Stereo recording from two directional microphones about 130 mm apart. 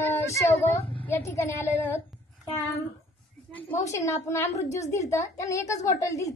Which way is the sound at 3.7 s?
25° left (ahead or behind).